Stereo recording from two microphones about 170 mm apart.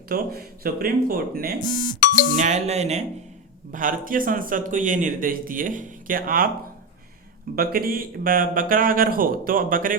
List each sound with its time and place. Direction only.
0.1 s speech: 60° right (ahead or behind)
1.5 s speech: 25° left (ahead or behind)
2.3 s speech: 45° right (ahead or behind)
3.7 s speech: 50° right (ahead or behind)
7.5 s speech: 60° right (ahead or behind)